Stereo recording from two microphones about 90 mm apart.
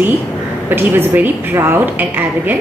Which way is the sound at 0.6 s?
20° right (ahead or behind).